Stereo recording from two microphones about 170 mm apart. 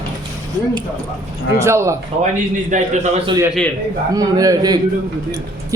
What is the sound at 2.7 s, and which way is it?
Speech, 50° right (ahead or behind).